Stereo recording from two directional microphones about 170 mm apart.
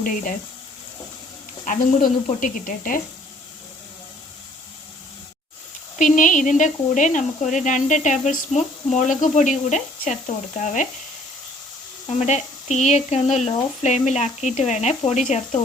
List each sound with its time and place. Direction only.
0.0 s speech: 50° left (ahead or behind)
1.6 s speech: 50° left (ahead or behind)
6.0 s speech: 50° left (ahead or behind)
12.0 s speech: 40° left (ahead or behind)